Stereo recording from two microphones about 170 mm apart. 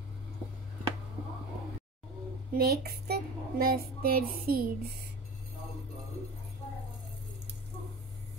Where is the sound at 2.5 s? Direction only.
70° right (ahead or behind).